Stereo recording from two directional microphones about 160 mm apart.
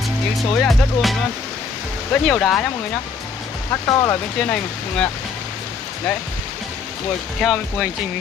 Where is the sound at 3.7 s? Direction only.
15° left (ahead or behind).